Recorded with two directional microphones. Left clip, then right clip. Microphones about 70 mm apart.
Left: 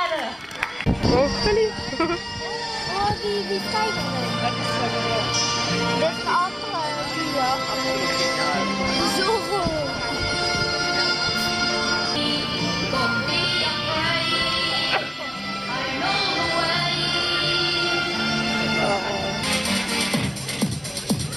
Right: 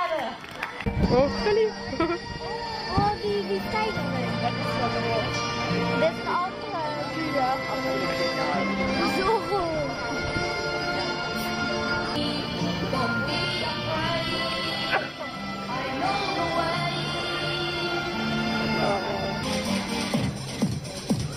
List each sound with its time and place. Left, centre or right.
1.1 s speech: centre
5.9 s speech: right
9.1 s music: right
11.7 s music: right
16.1 s music: right